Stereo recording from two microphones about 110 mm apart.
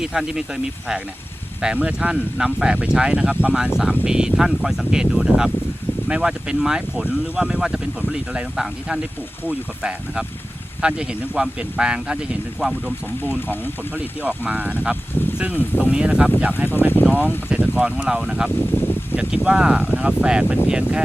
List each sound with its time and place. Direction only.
0.0 s speech: 5° right (ahead or behind)
13.9 s speech: 15° right (ahead or behind)
18.6 s a sound: 15° left (ahead or behind)
19.5 s speech: 10° right (ahead or behind)